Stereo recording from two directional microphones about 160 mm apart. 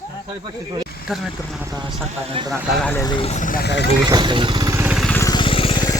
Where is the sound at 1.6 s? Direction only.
25° right (ahead or behind).